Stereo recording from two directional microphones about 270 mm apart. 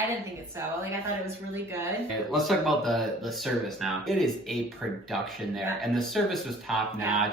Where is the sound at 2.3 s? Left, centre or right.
Centre.